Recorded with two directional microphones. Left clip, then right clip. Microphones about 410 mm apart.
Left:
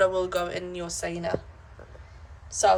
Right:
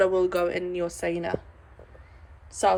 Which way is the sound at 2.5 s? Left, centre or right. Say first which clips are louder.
Left 2 dB; centre.